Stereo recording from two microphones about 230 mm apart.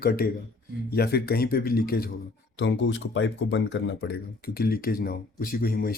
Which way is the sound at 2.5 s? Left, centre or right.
Left.